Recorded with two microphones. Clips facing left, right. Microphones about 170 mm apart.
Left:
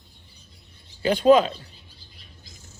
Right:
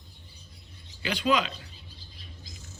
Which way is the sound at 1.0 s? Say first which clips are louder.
Left 10 dB; 45° left (ahead or behind).